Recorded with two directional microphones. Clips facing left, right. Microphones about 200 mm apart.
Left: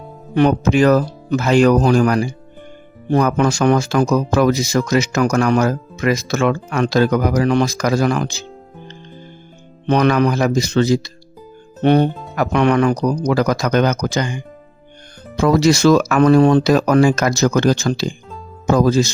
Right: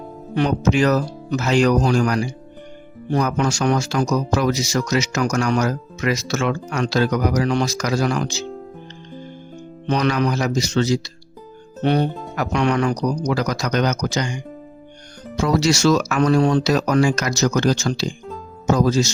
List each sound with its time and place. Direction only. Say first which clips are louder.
0.3 s speech: left 4 dB; 55° left (ahead or behind)
9.8 s speech: left 5 dB; 55° left (ahead or behind)